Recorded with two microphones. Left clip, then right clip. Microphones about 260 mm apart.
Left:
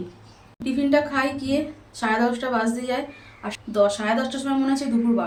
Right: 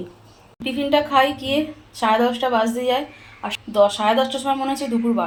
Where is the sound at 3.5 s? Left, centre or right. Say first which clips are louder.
Right 3 dB; centre.